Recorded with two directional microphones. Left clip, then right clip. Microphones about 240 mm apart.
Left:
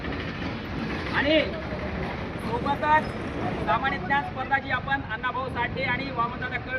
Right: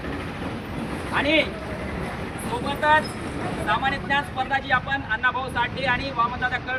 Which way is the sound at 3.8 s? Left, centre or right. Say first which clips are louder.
Right 2 dB; centre.